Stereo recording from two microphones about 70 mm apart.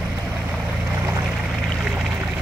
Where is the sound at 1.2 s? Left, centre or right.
Centre.